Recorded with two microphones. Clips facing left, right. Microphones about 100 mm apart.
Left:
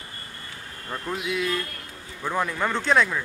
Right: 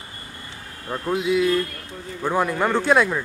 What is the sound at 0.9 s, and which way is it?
Speech, 10° right (ahead or behind).